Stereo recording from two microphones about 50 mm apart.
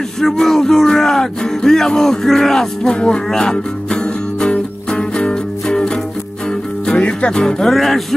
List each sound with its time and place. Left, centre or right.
0.2 s speech: centre
2.9 s music: centre
7.7 s music: centre